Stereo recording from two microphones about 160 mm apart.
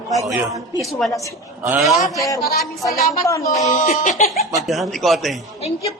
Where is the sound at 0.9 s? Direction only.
Centre (ahead or behind).